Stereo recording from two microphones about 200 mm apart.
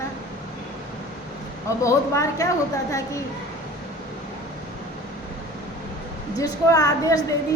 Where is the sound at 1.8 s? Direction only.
15° left (ahead or behind).